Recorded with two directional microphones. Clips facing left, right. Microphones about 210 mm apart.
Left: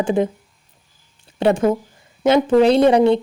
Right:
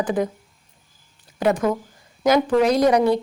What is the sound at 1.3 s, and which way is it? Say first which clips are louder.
Speech: left 4 dB; 30° left (ahead or behind).